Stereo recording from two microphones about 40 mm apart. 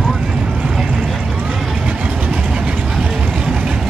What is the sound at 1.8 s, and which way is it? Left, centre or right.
Vehicle, right.